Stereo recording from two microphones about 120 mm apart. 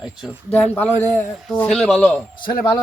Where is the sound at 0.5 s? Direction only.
15° left (ahead or behind).